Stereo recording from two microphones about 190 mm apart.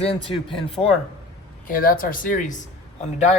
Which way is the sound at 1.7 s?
50° left (ahead or behind).